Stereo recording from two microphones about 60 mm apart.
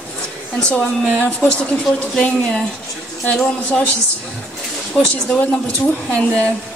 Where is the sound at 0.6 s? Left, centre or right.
Centre.